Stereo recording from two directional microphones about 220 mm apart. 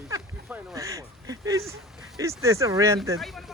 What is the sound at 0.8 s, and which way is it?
Duck, 15° right (ahead or behind).